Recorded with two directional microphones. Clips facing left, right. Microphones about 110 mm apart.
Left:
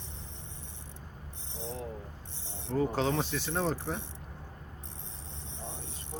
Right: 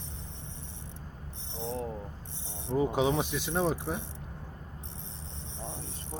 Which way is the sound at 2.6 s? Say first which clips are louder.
Right 2 dB; 15° right (ahead or behind).